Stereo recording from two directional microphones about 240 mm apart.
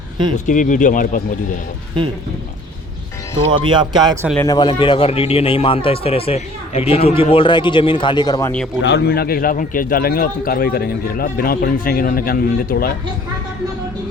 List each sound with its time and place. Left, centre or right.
0.3 s a man's voice: left
3.7 s speech: centre
4.4 s speech: centre
8.8 s a man's voice: left